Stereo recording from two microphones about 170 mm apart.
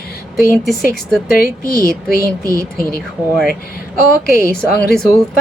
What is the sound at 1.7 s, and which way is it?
Speech, 20° right (ahead or behind).